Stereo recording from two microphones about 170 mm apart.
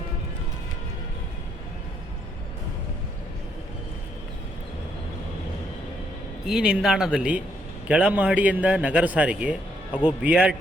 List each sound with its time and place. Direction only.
6.4 s a man's voice: 5° right (ahead or behind)
9.9 s a man's voice: 30° left (ahead or behind)
10.2 s a man's voice: 5° right (ahead or behind)